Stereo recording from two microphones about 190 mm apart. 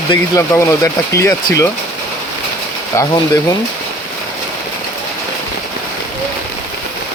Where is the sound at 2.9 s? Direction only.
15° left (ahead or behind).